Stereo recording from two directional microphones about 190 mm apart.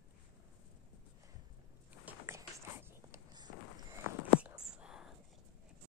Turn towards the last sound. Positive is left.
turn(degrees=-5)  # may be behind; listen again after turning